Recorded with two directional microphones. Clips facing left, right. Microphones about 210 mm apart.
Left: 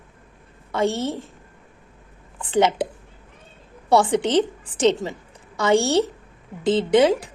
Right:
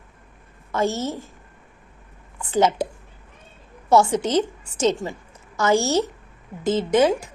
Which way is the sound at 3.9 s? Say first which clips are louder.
Even; 30° left (ahead or behind).